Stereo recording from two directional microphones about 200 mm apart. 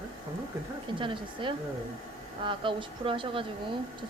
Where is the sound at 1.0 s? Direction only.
25° right (ahead or behind).